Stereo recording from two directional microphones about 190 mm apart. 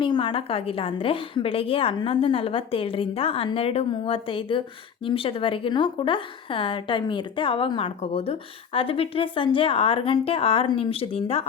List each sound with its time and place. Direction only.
0.0 s a woman's voice: 25° left (ahead or behind)